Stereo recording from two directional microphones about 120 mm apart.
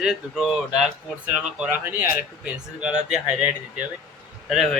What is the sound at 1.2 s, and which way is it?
Speech, 15° right (ahead or behind).